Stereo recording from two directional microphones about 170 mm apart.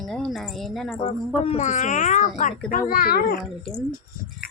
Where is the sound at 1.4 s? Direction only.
40° left (ahead or behind); by 3.4 s 60° left (ahead or behind).